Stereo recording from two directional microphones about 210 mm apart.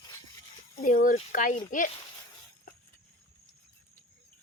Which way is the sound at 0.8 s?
40° left (ahead or behind).